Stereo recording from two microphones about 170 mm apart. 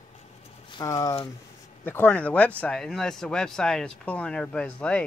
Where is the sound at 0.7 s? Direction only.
25° left (ahead or behind).